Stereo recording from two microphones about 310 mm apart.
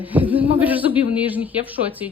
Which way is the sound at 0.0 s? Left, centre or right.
Centre.